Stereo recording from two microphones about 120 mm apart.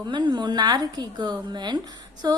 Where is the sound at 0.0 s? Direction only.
40° right (ahead or behind).